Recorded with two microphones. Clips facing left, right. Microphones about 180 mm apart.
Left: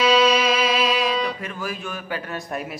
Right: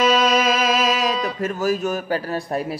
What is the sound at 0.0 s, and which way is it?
Music, 50° right (ahead or behind).